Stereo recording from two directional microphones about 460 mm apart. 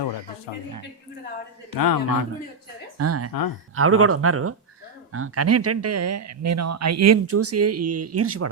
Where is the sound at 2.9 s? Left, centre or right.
Right.